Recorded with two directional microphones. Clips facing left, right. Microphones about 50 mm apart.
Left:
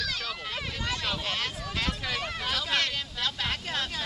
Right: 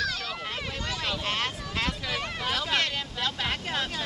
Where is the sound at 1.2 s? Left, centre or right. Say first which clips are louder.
Right 2 dB; right.